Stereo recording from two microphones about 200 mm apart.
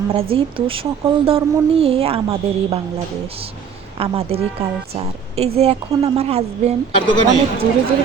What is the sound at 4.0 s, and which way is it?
A woman's voice, 30° right (ahead or behind).